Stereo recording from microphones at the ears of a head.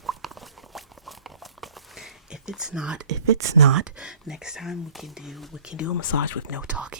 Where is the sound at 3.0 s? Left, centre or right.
Right.